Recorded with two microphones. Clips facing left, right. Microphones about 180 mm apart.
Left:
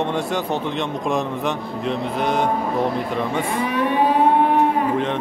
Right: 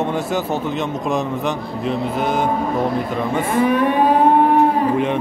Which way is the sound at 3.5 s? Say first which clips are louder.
Right 6 dB; 50° right (ahead or behind).